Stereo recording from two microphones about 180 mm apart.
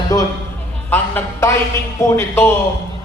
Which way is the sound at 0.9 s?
10° left (ahead or behind).